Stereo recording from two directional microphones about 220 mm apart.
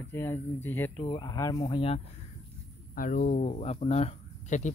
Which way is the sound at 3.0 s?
35° left (ahead or behind).